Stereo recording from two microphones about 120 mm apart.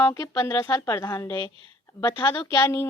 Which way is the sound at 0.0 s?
25° left (ahead or behind).